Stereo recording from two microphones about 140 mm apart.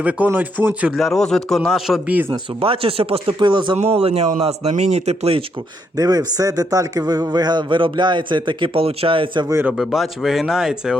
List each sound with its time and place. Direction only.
0.0 s speech: 10° right (ahead or behind)
0.8 s a man's voice: centre (ahead or behind)
2.3 s speech: 40° right (ahead or behind)
6.0 s speech: 25° right (ahead or behind)
9.5 s speech: 15° right (ahead or behind)
9.7 s a man's voice: centre (ahead or behind)